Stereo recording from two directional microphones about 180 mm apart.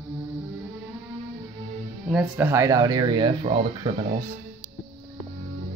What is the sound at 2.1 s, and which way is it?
Speech, centre (ahead or behind).